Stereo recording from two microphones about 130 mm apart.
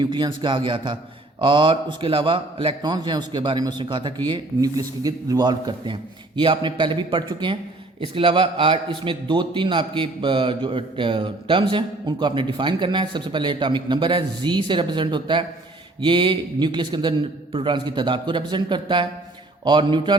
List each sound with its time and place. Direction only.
0.0 s a man's voice: 35° right (ahead or behind)